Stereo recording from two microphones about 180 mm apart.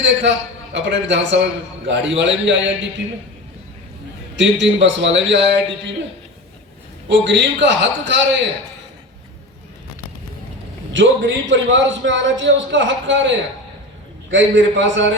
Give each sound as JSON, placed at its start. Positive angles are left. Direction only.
{"t": 0.0, "sound": "a man's voice", "side_deg": -85}
{"t": 4.4, "sound": "a man's voice", "side_deg": -90}
{"t": 7.1, "sound": "a man's voice", "side_deg": -85}
{"t": 10.9, "sound": "a man's voice", "side_deg": -90}